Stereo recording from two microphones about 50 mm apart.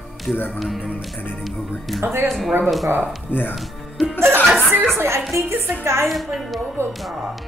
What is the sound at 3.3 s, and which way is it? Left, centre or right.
Speech, left.